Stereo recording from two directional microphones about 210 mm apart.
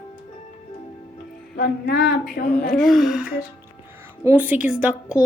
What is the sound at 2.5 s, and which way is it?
A woman's voice, 5° left (ahead or behind).